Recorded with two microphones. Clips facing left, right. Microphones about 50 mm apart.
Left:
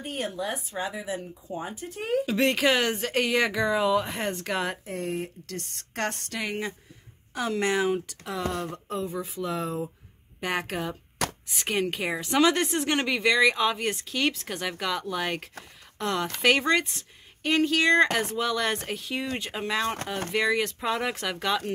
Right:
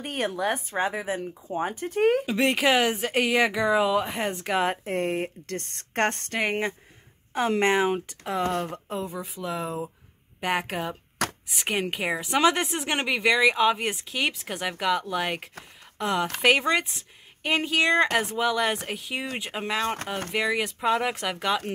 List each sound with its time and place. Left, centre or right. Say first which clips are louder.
0.0 s speech: right 4 dB; right
2.2 s speech: right 1 dB; centre
4.8 s speech: right 5 dB; right; by 9.1 s centre
9.1 s speech: left 1 dB; centre